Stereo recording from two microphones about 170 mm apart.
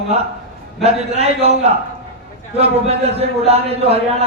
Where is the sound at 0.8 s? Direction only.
35° right (ahead or behind).